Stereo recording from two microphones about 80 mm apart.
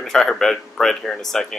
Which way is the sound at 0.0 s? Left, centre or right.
Centre.